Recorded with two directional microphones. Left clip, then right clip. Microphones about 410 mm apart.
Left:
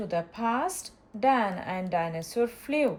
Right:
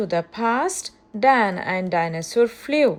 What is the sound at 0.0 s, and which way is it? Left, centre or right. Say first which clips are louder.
A woman's voice: right 7 dB; centre.